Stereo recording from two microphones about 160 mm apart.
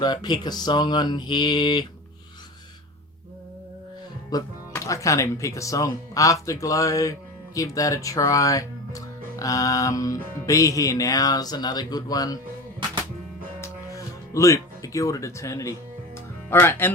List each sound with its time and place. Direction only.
0.0 s speech: 25° left (ahead or behind)
4.3 s speech: 25° left (ahead or behind)
13.6 s music: 20° left (ahead or behind)
16.5 s speech: 15° left (ahead or behind)